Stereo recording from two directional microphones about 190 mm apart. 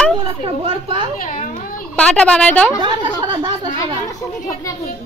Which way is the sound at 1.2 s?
45° left (ahead or behind).